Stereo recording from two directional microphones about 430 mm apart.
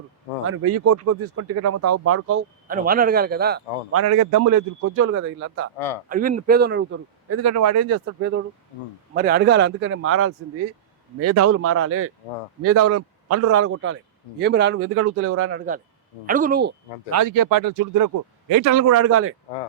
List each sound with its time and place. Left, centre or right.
0.4 s a man's voice: right
2.6 s a man's voice: centre
4.0 s a man's voice: right
17.1 s a man's voice: right